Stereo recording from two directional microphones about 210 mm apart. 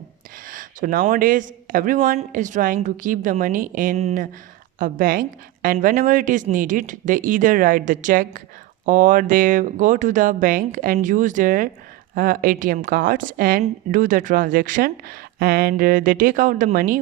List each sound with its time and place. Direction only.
0.4 s a man's voice: 40° right (ahead or behind)